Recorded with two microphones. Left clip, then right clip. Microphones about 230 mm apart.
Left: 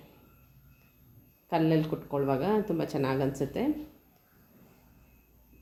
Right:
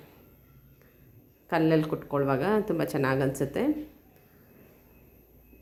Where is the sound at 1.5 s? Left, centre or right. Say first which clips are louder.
Right 3 dB; centre.